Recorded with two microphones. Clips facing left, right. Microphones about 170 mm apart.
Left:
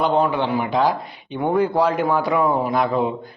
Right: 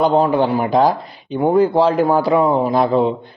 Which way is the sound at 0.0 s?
35° right (ahead or behind).